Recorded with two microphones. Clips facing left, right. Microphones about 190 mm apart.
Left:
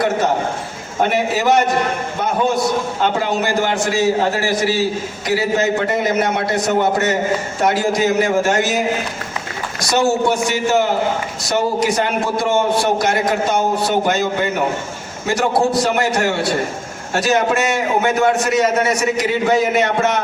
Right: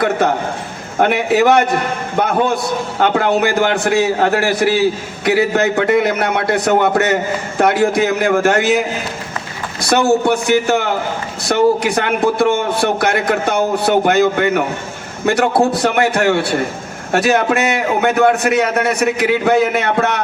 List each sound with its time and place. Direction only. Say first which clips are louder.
1.0 s a man's voice: right 4 dB; 60° right (ahead or behind)
3.0 s a man's voice: right 7 dB; 60° right (ahead or behind)
9.8 s a man's voice: right 3 dB; 60° right (ahead or behind)